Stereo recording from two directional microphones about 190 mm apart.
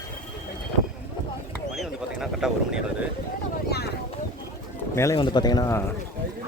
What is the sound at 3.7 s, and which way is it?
Vehicle, 55° left (ahead or behind).